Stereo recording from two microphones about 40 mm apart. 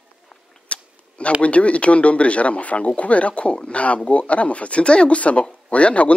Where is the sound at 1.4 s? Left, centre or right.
Left.